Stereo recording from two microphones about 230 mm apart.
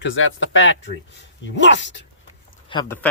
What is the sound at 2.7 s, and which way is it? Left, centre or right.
Speech, left.